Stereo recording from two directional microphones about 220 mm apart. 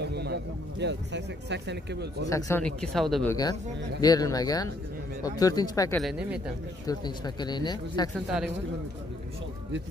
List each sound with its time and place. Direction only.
0.0 s a man's voice: 50° right (ahead or behind)
2.2 s speech: 15° left (ahead or behind)
4.0 s speech: 15° left (ahead or behind)
5.9 s speech: centre (ahead or behind)
6.9 s speech: 20° left (ahead or behind)
8.3 s speech: 5° right (ahead or behind)